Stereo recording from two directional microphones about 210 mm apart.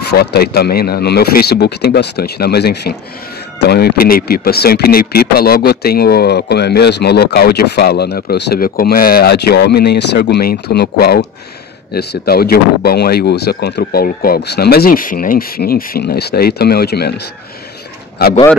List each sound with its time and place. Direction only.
0.0 s speech: 50° left (ahead or behind)